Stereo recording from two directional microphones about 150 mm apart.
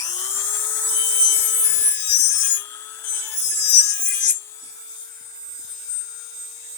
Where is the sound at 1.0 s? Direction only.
15° left (ahead or behind).